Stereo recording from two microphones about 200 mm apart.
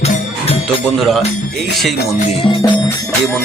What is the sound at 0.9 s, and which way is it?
Speech, centre (ahead or behind).